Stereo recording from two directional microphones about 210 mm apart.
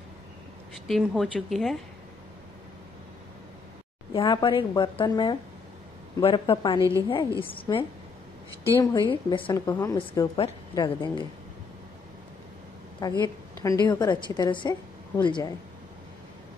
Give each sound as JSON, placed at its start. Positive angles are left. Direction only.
{"t": 0.8, "sound": "a woman's voice", "side_deg": 0}
{"t": 4.1, "sound": "a woman's voice", "side_deg": 20}
{"t": 6.8, "sound": "a woman's voice", "side_deg": -15}
{"t": 7.1, "sound": "a woman's voice", "side_deg": 25}
{"t": 9.1, "sound": "a woman's voice", "side_deg": 25}
{"t": 13.0, "sound": "a woman's voice", "side_deg": 20}